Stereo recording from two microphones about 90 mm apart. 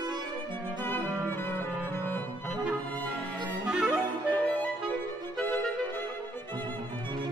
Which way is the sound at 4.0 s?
20° left (ahead or behind).